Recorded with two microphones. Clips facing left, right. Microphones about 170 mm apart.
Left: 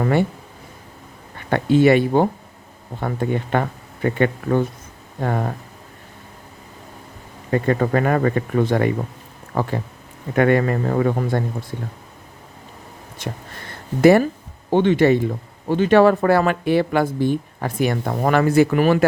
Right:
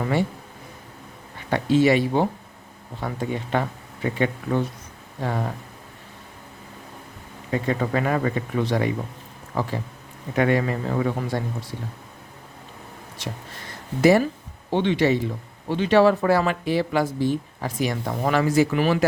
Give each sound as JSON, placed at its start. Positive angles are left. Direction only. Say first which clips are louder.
{"t": 0.0, "sound": "speech", "louder": "left 5 dB", "side_deg": 55}
{"t": 1.5, "sound": "speech", "louder": "left 4 dB", "side_deg": 55}
{"t": 7.5, "sound": "speech", "louder": "left 5 dB", "side_deg": 50}
{"t": 13.2, "sound": "speech", "louder": "left 4 dB", "side_deg": 50}